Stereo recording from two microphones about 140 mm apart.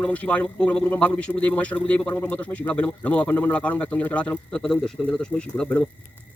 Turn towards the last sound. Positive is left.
turn(degrees=10)  # may be behind; listen again after turning